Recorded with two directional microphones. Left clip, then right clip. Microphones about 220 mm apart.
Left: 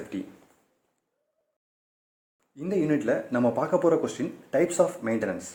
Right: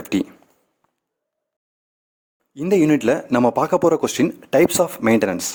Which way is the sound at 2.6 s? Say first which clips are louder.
Right 10 dB; 35° right (ahead or behind).